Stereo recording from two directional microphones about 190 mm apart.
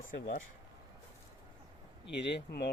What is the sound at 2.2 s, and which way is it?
Speech, 60° left (ahead or behind).